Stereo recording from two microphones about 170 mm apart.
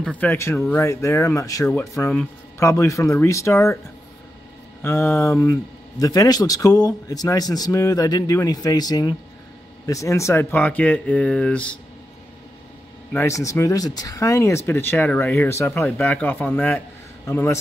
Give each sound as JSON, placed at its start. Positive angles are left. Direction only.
{"t": 0.2, "sound": "speech", "side_deg": 15}
{"t": 4.8, "sound": "speech", "side_deg": 15}
{"t": 13.1, "sound": "speech", "side_deg": 15}